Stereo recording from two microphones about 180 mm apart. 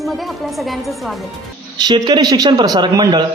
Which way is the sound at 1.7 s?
25° right (ahead or behind).